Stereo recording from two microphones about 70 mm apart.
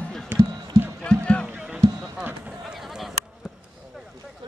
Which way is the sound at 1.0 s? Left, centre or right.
Centre.